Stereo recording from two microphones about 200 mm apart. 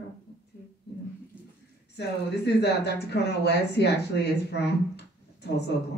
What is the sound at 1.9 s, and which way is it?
Speech, 55° left (ahead or behind).